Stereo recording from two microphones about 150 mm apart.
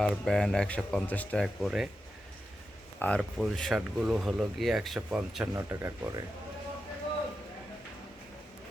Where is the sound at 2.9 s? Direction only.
10° left (ahead or behind).